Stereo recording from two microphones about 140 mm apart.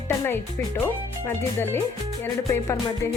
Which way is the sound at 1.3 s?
15° left (ahead or behind).